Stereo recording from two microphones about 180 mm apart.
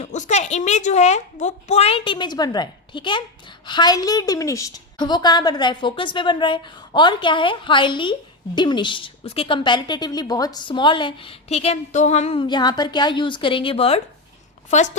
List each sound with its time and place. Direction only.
0.0 s a woman's voice: 40° left (ahead or behind)